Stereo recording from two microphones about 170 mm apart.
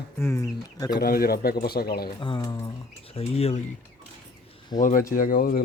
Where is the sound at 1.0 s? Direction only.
65° left (ahead or behind).